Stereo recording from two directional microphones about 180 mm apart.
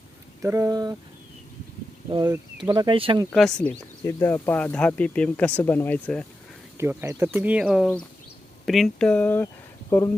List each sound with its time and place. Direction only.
0.4 s speech: 15° right (ahead or behind)
2.0 s speech: 25° right (ahead or behind)
3.2 s speech: 5° left (ahead or behind)
6.7 s speech: 15° right (ahead or behind); by 9.5 s 10° left (ahead or behind)